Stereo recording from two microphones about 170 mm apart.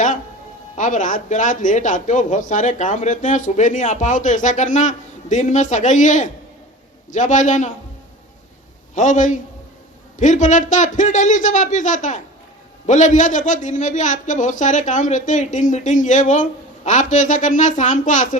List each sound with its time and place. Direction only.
0.8 s a man's voice: 45° left (ahead or behind)
9.0 s a man's voice: 45° left (ahead or behind)